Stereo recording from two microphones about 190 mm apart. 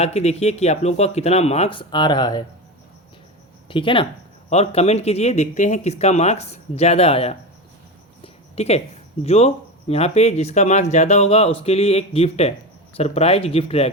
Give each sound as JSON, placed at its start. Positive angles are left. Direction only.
{"t": 0.0, "sound": "speech", "side_deg": 35}
{"t": 3.7, "sound": "speech", "side_deg": 25}
{"t": 8.2, "sound": "a sound", "side_deg": 35}
{"t": 9.2, "sound": "speech", "side_deg": 30}